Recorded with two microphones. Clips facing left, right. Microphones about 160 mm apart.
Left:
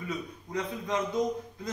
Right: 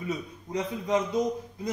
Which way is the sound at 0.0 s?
20° right (ahead or behind).